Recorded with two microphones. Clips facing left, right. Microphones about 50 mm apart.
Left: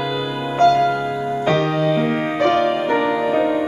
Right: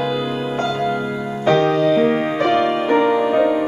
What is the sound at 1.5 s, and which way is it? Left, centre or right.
Music, centre.